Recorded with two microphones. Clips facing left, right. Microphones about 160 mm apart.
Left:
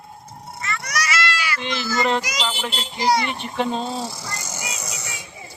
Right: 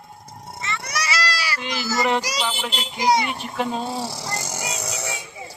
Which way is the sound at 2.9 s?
20° right (ahead or behind).